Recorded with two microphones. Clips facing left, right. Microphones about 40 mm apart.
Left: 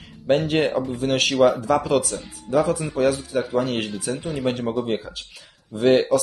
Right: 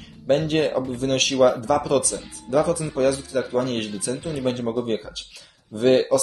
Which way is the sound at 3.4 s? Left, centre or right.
Centre.